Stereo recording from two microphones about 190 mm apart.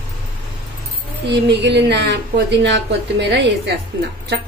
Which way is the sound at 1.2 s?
65° right (ahead or behind).